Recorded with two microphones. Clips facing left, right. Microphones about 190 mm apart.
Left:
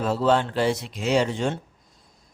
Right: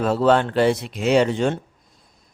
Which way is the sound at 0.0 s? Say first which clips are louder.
Right 4 dB; 60° right (ahead or behind).